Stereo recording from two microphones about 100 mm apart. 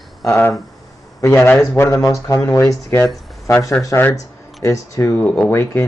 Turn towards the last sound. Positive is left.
turn(degrees=20)  # may be behind; listen again after turning